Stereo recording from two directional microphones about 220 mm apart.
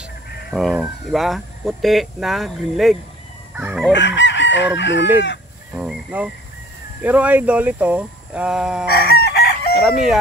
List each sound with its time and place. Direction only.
0.5 s speech: centre (ahead or behind)
3.5 s chicken: 5° right (ahead or behind)
3.9 s chicken: 55° left (ahead or behind)
5.8 s speech: 5° right (ahead or behind)
8.8 s chicken: 45° left (ahead or behind)
9.8 s speech: centre (ahead or behind)